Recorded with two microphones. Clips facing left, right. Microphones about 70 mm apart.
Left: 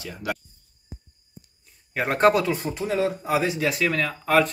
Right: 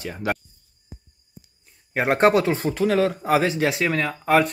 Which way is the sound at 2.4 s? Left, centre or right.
Right.